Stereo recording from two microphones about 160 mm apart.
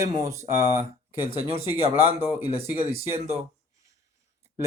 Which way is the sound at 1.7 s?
40° right (ahead or behind).